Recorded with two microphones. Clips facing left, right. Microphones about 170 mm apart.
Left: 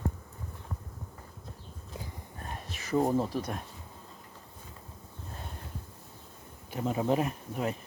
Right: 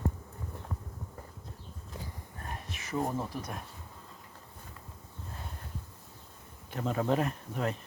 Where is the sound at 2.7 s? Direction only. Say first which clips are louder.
Left 6 dB; 35° left (ahead or behind).